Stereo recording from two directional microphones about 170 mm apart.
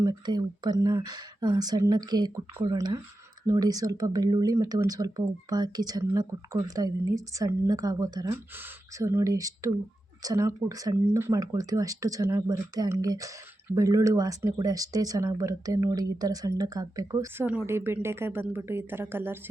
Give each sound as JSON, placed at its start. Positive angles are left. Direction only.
{"t": 0.0, "sound": "a woman's voice", "side_deg": -25}